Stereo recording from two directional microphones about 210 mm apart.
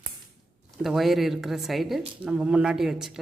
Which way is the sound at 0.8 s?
Centre (ahead or behind).